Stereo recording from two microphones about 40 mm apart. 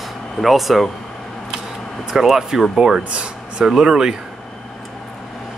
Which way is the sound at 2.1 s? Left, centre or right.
Centre.